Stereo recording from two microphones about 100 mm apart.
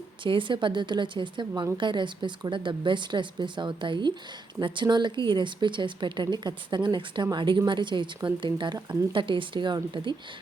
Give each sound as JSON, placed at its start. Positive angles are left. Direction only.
{"t": 0.2, "sound": "a woman's voice", "side_deg": -55}